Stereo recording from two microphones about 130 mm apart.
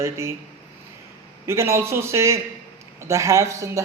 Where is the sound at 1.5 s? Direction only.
20° right (ahead or behind).